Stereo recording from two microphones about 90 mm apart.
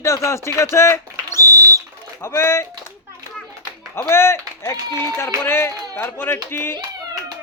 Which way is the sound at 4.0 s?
30° left (ahead or behind).